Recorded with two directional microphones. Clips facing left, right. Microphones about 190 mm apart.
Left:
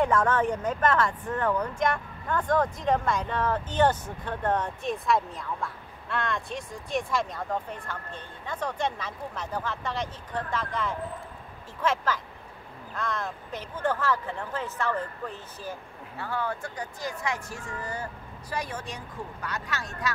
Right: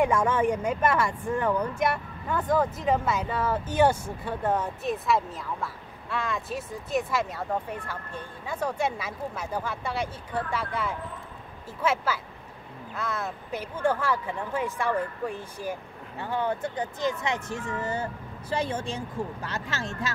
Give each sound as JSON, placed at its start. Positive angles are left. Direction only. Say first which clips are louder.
{"t": 0.0, "sound": "speech", "louder": "right 1 dB", "side_deg": -10}